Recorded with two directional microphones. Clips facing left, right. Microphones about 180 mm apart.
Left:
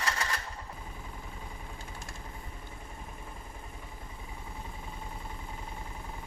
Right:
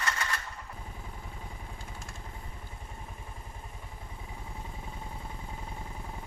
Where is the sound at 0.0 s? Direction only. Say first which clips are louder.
Even; 35° left (ahead or behind).